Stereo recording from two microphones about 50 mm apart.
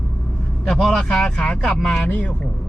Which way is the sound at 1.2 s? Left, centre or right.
Centre.